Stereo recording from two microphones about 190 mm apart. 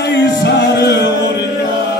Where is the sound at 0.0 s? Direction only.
60° left (ahead or behind).